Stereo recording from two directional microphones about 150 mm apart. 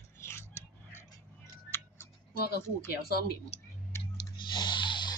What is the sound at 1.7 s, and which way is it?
Tick, 15° left (ahead or behind).